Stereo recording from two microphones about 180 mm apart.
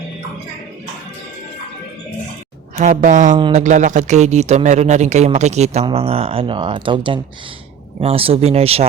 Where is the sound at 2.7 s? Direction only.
45° right (ahead or behind).